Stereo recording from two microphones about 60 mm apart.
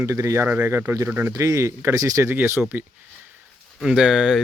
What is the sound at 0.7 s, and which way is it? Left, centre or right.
Speech, right.